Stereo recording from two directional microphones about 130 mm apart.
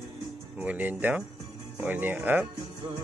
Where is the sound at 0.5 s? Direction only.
10° right (ahead or behind).